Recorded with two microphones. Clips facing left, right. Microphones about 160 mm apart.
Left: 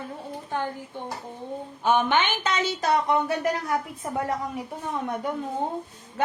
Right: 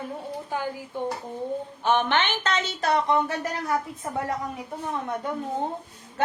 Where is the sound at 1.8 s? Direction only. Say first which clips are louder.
Left 1 dB; 10° left (ahead or behind).